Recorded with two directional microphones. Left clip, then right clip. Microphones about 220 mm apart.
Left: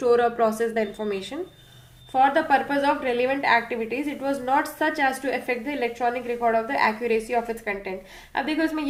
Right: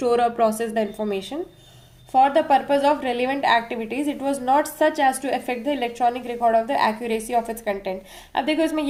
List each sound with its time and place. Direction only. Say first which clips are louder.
0.0 s a woman's voice: right 1 dB; 40° right (ahead or behind)